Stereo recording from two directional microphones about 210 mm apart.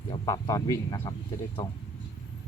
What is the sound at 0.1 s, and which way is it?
Speech, 20° left (ahead or behind).